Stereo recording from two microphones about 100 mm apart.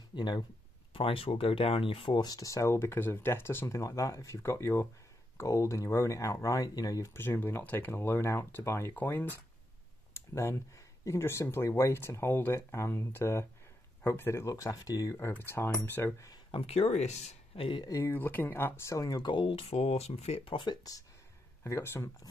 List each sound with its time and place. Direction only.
0.1 s speech: 50° left (ahead or behind)
0.9 s speech: 65° left (ahead or behind)
2.1 s speech: 35° left (ahead or behind)
7.2 s speech: 20° left (ahead or behind)
15.1 s speech: 20° left (ahead or behind)
16.5 s speech: 85° left
17.6 s speech: 60° left (ahead or behind)
17.8 s speech: 35° left (ahead or behind)
18.1 s speech: 20° left (ahead or behind)
19.2 s speech: 60° left (ahead or behind); by 20.5 s 90° left
21.6 s speech: 25° left (ahead or behind)